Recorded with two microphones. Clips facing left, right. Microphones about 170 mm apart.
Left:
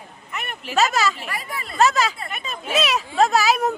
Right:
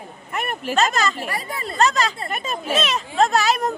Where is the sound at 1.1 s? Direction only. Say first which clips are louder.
Right 3 dB; 40° right (ahead or behind).